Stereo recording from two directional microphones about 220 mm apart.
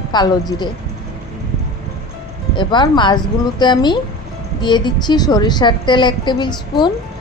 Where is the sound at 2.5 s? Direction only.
20° left (ahead or behind).